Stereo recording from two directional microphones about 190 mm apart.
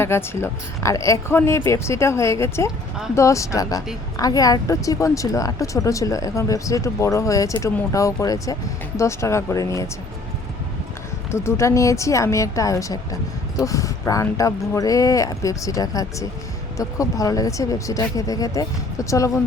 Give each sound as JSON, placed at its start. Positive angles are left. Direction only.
{"t": 0.0, "sound": "speech", "side_deg": 15}
{"t": 11.3, "sound": "speech", "side_deg": 15}